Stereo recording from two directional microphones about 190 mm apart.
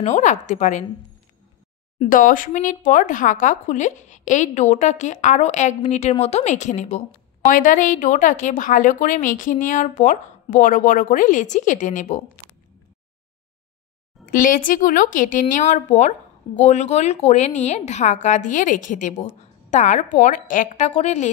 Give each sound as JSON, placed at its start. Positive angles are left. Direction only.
{"t": 0.0, "sound": "speech", "side_deg": 40}
{"t": 2.0, "sound": "a woman's voice", "side_deg": 45}
{"t": 14.2, "sound": "a woman's voice", "side_deg": 45}